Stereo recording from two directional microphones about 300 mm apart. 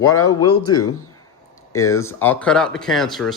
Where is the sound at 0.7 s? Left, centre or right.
Centre.